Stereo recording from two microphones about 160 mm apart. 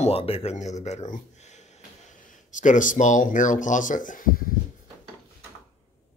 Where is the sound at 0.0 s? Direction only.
35° left (ahead or behind); by 4.6 s 65° left (ahead or behind).